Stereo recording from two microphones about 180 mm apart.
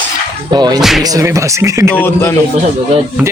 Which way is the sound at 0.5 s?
25° right (ahead or behind).